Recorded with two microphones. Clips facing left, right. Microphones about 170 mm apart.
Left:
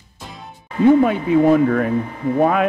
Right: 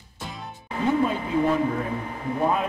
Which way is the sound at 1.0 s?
70° left (ahead or behind).